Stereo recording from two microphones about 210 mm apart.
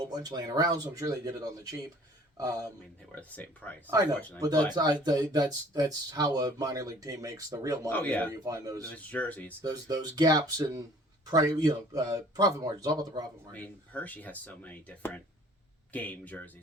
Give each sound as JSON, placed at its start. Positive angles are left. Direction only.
{"t": 0.1, "sound": "speech", "side_deg": -20}
{"t": 3.2, "sound": "speech", "side_deg": 5}
{"t": 4.4, "sound": "speech", "side_deg": -15}
{"t": 7.9, "sound": "speech", "side_deg": 5}
{"t": 8.4, "sound": "speech", "side_deg": -15}
{"t": 8.9, "sound": "speech", "side_deg": 5}
{"t": 9.6, "sound": "speech", "side_deg": -15}
{"t": 13.5, "sound": "speech", "side_deg": 5}